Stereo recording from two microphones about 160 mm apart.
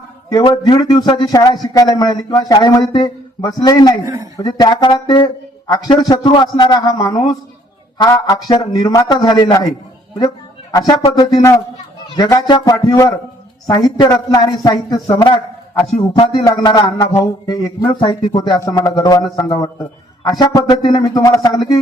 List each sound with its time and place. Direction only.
0.3 s speech: 25° left (ahead or behind)
4.0 s a woman's voice: 20° right (ahead or behind)
4.4 s speech: 25° left (ahead or behind)
10.7 s speech: 25° left (ahead or behind)
16.5 s speech: 25° left (ahead or behind)